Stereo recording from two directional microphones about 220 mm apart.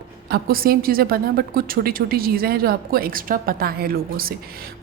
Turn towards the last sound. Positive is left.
turn(degrees=-40)  # may be behind; listen again after turning